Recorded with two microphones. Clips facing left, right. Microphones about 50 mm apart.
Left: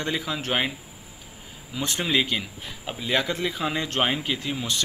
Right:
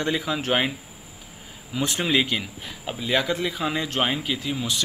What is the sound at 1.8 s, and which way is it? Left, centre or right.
Speech, centre.